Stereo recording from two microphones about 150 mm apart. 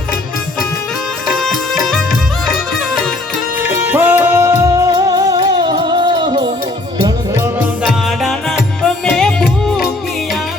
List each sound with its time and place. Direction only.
1.4 s music: centre (ahead or behind)
3.7 s music: 15° right (ahead or behind); by 6.5 s 30° right (ahead or behind)
7.0 s music: 20° right (ahead or behind)
7.9 s music: centre (ahead or behind)